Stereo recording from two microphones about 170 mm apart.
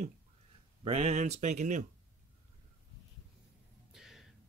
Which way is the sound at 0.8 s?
40° right (ahead or behind).